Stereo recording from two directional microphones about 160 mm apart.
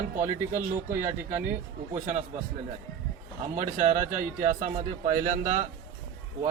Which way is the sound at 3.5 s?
45° right (ahead or behind).